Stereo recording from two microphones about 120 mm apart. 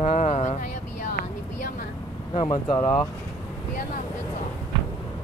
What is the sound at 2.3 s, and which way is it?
Speech, 40° left (ahead or behind).